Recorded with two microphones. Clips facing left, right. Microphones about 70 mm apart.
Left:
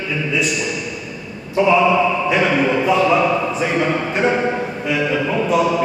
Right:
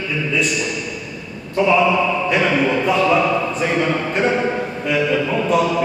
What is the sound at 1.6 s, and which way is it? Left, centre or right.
A man's voice, centre.